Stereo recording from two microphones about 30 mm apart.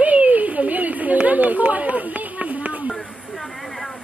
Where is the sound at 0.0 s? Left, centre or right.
Right.